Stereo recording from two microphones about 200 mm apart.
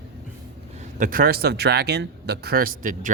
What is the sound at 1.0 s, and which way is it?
Speech, 45° right (ahead or behind).